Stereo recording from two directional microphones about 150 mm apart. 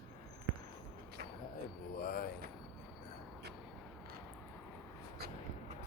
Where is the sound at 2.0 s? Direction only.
85° left.